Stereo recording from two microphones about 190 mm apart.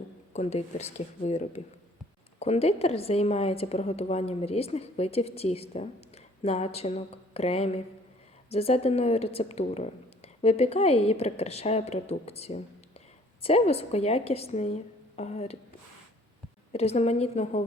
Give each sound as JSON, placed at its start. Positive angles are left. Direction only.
{"t": 0.3, "sound": "a woman's voice", "side_deg": 35}
{"t": 16.7, "sound": "a woman's voice", "side_deg": 35}